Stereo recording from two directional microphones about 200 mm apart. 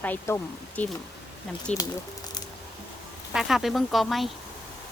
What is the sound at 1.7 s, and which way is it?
Speech, 35° left (ahead or behind).